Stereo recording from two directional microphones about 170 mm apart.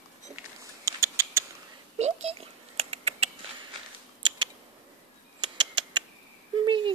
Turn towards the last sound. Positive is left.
turn(degrees=-30)  # may be behind; listen again after turning